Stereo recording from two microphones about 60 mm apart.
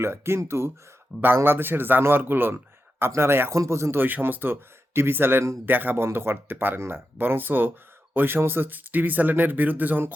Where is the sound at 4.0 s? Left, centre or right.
Right.